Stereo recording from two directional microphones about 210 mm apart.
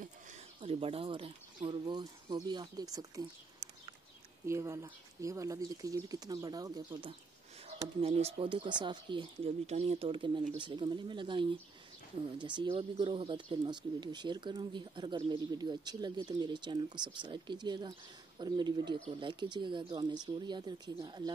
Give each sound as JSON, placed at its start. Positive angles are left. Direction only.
{"t": 0.6, "sound": "speech", "side_deg": -25}
{"t": 4.5, "sound": "speech", "side_deg": -15}